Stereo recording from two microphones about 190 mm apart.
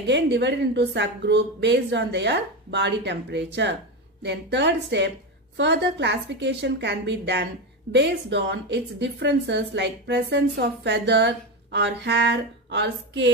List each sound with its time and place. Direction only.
0.0 s a woman's voice: 65° right (ahead or behind)